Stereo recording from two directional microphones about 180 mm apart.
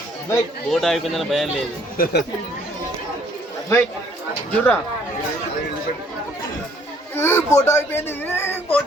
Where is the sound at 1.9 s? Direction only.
55° left (ahead or behind).